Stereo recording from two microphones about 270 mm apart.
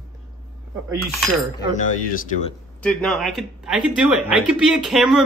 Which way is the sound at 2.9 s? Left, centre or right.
Centre.